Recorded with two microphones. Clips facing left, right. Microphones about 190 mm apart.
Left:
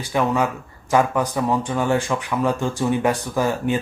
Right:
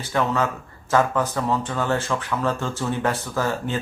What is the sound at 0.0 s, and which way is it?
Speech, 15° left (ahead or behind).